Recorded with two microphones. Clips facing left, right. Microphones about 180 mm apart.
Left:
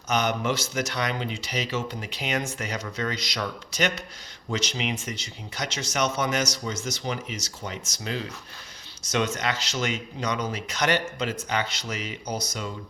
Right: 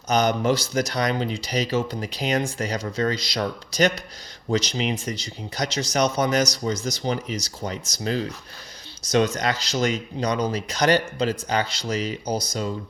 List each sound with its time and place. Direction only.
0.1 s speech: 35° right (ahead or behind)